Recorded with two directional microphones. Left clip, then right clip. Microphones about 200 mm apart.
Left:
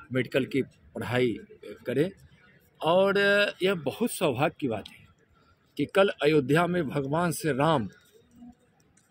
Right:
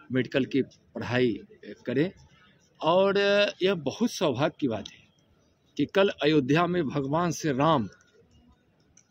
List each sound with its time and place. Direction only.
0.1 s speech: 30° right (ahead or behind)
3.8 s speech: 10° right (ahead or behind)
4.4 s speech: 35° right (ahead or behind)
5.9 s speech: 35° right (ahead or behind)
7.3 s speech: 5° right (ahead or behind)